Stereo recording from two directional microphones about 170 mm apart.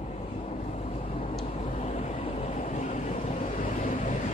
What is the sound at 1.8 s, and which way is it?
Train, 40° left (ahead or behind).